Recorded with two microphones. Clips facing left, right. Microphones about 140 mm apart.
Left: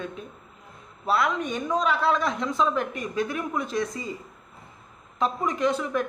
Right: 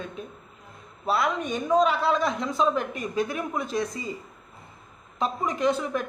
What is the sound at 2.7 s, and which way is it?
Speech, 35° right (ahead or behind).